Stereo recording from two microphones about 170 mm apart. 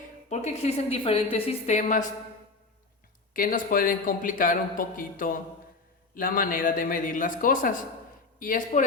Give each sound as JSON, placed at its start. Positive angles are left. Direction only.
{"t": 0.3, "sound": "a woman's voice", "side_deg": 40}
{"t": 3.3, "sound": "a man's voice", "side_deg": 55}